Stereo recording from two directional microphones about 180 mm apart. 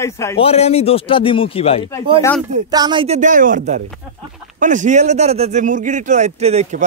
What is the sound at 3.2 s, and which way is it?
Speech, 45° right (ahead or behind).